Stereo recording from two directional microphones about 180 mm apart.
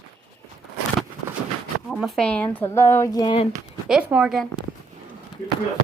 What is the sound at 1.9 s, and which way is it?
Speech, centre (ahead or behind).